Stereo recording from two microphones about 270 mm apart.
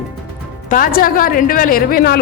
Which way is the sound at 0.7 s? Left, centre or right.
Left.